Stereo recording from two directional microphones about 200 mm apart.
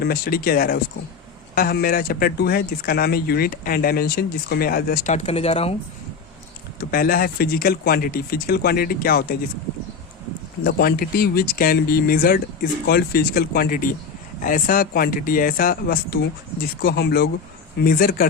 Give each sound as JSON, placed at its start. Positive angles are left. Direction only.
{"t": 0.0, "sound": "speech", "side_deg": 50}
{"t": 6.7, "sound": "speech", "side_deg": 45}
{"t": 10.6, "sound": "speech", "side_deg": 50}